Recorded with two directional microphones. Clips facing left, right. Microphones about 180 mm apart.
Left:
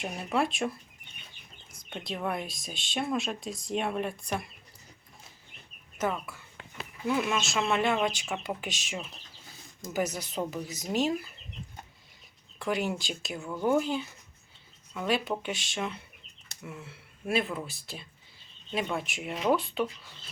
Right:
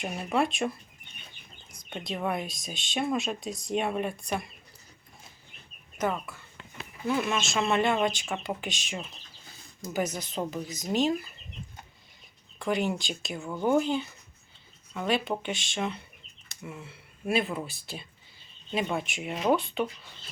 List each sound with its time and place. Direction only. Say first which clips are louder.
0.1 s speech: right 2 dB; 5° right (ahead or behind)
1.9 s speech: right 2 dB; centre (ahead or behind)
6.0 s speech: right 1 dB; 5° left (ahead or behind)
12.5 s speech: right 2 dB; 5° left (ahead or behind)